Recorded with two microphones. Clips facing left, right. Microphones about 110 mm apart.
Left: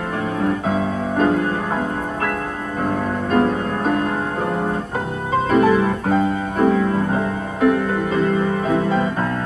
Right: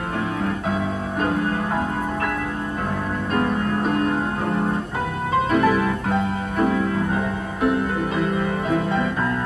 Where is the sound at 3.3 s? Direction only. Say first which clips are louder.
Left 3 dB; 35° left (ahead or behind).